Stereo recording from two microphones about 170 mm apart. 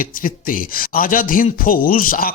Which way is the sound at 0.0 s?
55° left (ahead or behind).